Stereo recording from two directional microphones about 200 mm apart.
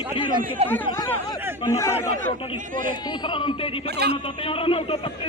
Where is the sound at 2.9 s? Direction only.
20° left (ahead or behind).